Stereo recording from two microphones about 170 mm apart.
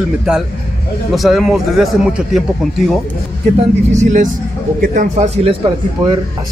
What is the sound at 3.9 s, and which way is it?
A man's voice, 45° right (ahead or behind).